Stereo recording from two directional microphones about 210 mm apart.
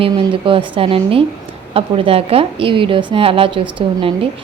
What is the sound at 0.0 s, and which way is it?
A woman's voice, 25° right (ahead or behind).